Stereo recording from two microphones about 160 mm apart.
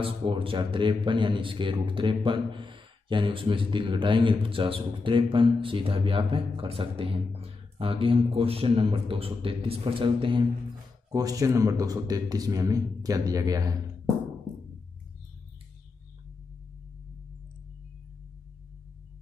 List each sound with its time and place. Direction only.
0.0 s a man's voice: 35° right (ahead or behind)